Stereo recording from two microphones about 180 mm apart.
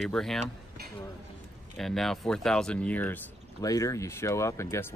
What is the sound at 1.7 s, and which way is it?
Speech, centre (ahead or behind).